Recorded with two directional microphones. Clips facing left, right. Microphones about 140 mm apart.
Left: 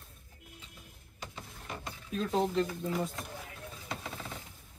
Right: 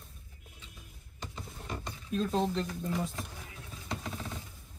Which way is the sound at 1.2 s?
5° left (ahead or behind).